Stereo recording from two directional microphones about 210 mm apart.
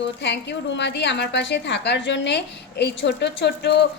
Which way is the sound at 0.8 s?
55° left (ahead or behind).